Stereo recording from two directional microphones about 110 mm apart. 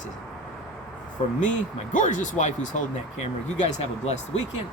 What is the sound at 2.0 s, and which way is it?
Speech, 90° left.